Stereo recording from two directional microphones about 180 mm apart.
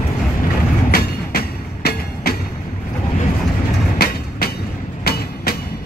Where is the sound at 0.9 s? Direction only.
60° left (ahead or behind).